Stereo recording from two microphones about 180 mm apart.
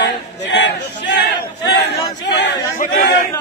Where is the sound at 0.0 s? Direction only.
75° left (ahead or behind).